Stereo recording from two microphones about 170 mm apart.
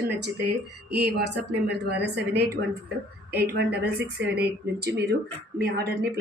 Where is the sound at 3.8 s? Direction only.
75° right (ahead or behind).